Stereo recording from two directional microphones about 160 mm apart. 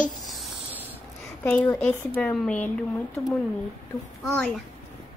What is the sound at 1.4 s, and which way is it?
Speech, 15° left (ahead or behind).